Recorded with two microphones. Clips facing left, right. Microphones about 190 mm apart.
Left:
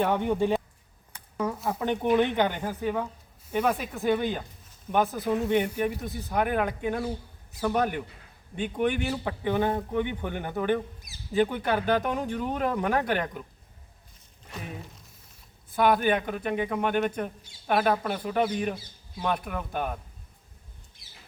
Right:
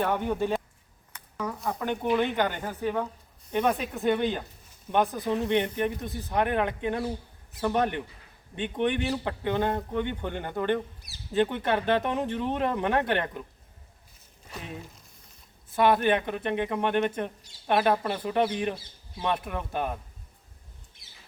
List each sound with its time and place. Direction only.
0.0 s speech: 10° left (ahead or behind)
1.8 s speech: 20° left (ahead or behind); by 13.4 s centre (ahead or behind)
15.7 s speech: centre (ahead or behind)